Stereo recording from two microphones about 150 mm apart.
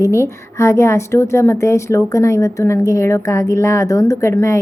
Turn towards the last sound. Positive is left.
turn(degrees=20)  # may be behind; listen again after turning